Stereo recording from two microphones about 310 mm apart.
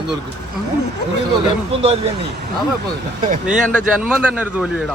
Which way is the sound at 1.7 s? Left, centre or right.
Centre.